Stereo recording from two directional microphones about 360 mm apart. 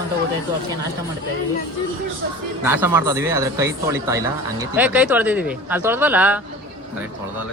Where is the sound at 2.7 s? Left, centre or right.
Centre.